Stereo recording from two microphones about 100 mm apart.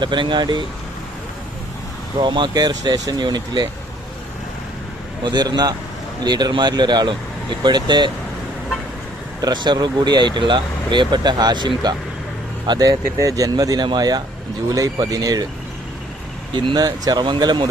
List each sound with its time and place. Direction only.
0.0 s speech: 50° right (ahead or behind)
2.1 s speech: 50° right (ahead or behind)
5.2 s speech: 45° right (ahead or behind)
9.4 s speech: 45° right (ahead or behind)
16.6 s speech: 45° right (ahead or behind)